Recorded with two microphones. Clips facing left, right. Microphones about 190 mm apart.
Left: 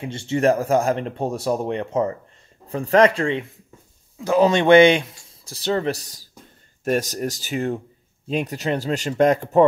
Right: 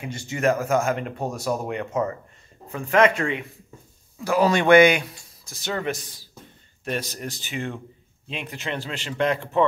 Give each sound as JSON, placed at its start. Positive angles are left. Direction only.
{"t": 0.0, "sound": "speech", "side_deg": 30}